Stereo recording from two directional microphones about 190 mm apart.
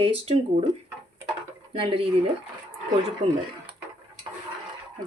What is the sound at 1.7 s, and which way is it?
Speech, 30° right (ahead or behind).